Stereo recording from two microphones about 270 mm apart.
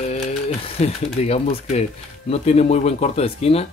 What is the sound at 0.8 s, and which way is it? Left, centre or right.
Speech, left.